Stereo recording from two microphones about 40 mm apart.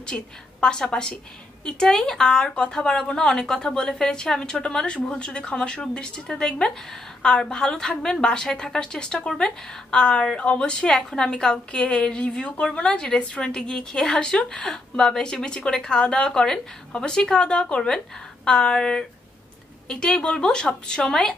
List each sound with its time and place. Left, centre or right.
0.0 s a woman's voice: left
6.2 s speech: centre
7.5 s a woman's voice: left